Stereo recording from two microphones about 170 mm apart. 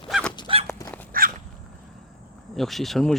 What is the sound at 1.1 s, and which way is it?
Walk, 55° right (ahead or behind).